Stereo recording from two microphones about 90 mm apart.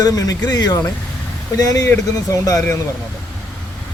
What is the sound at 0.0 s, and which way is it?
Speech, 45° left (ahead or behind).